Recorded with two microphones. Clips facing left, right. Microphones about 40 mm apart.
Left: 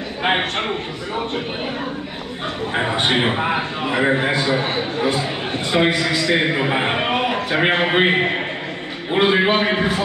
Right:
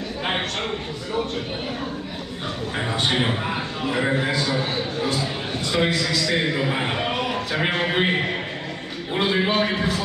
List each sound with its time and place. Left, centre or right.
0.2 s a man's voice: left
2.7 s a man's voice: left